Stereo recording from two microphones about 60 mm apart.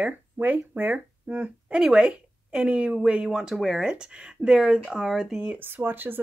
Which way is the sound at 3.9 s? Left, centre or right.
Centre.